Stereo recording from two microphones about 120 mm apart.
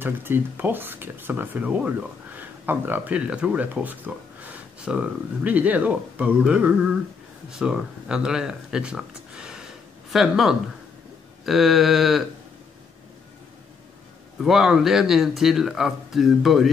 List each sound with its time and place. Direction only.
0.0 s speech: 15° right (ahead or behind); by 12.3 s centre (ahead or behind)
14.4 s speech: centre (ahead or behind)